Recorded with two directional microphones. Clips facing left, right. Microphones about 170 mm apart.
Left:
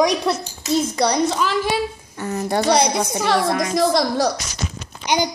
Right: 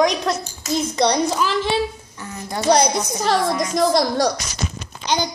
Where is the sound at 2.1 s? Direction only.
65° left (ahead or behind).